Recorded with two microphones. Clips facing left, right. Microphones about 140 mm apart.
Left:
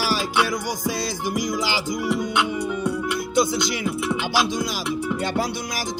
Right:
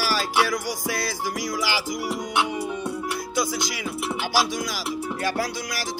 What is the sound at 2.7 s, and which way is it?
Music, 30° right (ahead or behind).